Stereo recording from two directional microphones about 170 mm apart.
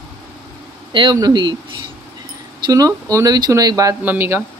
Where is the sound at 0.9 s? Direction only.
25° right (ahead or behind).